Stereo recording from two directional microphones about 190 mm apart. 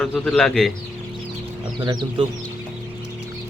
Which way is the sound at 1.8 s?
20° right (ahead or behind).